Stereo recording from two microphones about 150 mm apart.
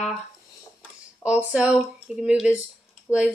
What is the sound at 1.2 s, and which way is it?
Speech, 10° right (ahead or behind).